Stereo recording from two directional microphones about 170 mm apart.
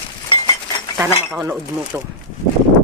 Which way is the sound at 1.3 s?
10° right (ahead or behind).